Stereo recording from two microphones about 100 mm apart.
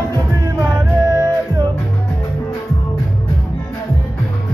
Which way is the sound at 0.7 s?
40° right (ahead or behind).